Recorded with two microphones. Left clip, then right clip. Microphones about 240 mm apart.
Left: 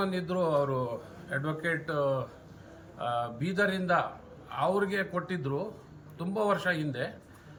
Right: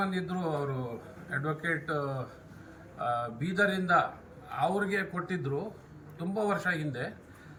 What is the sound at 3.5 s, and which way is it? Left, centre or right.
A man's voice, centre.